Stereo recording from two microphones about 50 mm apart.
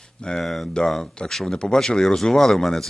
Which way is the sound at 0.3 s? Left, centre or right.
Centre.